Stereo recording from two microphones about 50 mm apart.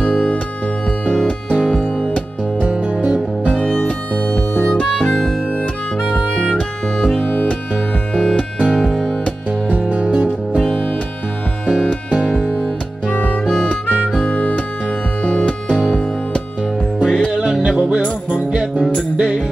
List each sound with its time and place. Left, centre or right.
0.0 s music: left
2.7 s music: right
6.1 s music: left
7.2 s music: left
8.1 s music: centre
9.7 s music: right
12.1 s music: centre
13.1 s music: left
17.0 s music: centre
17.3 s music: centre